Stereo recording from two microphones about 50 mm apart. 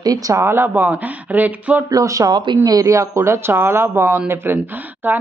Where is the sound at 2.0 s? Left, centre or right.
Right.